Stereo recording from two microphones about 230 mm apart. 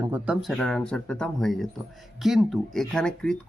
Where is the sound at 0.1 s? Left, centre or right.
Centre.